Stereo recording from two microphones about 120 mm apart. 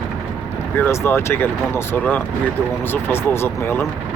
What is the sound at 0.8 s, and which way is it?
Speech, 20° left (ahead or behind).